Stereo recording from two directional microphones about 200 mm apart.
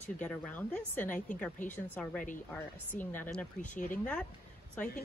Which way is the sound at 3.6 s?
40° left (ahead or behind).